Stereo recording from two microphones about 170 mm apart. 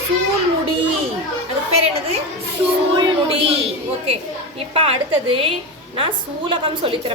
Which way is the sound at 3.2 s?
35° right (ahead or behind).